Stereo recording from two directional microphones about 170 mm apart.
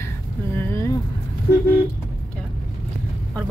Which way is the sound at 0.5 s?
15° left (ahead or behind).